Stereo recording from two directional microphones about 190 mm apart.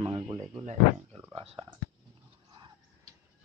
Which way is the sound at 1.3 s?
25° right (ahead or behind).